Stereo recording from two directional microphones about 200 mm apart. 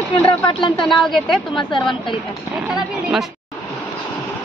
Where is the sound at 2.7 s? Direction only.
5° right (ahead or behind).